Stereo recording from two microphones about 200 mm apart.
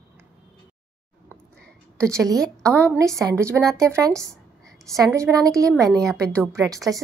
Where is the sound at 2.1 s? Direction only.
15° right (ahead or behind).